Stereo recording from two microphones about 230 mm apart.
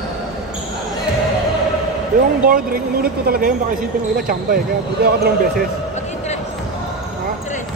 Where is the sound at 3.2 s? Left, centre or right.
Right.